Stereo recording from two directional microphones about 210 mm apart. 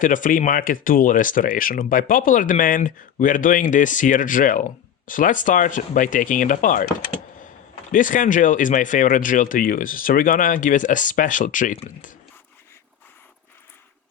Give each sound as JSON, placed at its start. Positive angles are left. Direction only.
{"t": 0.0, "sound": "speech", "side_deg": 40}
{"t": 7.9, "sound": "speech", "side_deg": 40}